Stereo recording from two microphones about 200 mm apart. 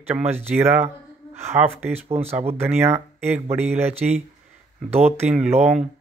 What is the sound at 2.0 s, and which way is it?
Speech, 30° right (ahead or behind).